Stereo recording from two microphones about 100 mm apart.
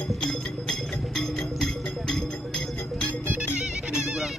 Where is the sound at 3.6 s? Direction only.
5° right (ahead or behind).